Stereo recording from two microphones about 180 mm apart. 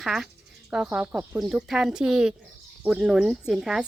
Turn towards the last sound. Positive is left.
turn(degrees=-5)  # may be behind; listen again after turning